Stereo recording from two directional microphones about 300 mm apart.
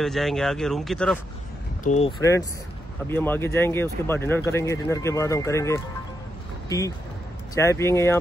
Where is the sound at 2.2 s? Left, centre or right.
Centre.